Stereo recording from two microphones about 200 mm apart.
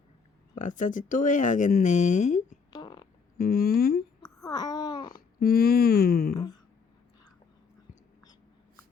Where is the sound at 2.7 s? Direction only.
25° left (ahead or behind).